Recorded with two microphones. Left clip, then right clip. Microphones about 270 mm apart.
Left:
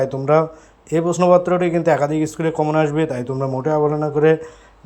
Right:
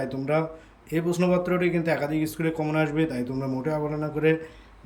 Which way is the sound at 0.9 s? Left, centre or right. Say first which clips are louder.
Left 11 dB; centre.